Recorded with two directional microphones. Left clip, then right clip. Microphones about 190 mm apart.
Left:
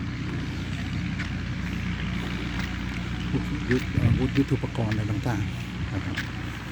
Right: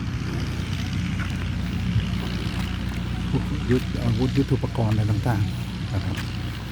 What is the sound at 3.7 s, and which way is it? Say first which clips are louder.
Speech: right 2 dB; 5° right (ahead or behind).